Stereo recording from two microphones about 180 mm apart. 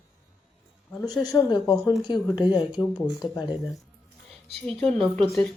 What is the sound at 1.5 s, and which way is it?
A woman's voice, 20° left (ahead or behind).